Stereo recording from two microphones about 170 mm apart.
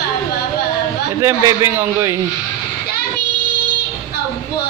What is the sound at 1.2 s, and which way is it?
Speech, 15° right (ahead or behind).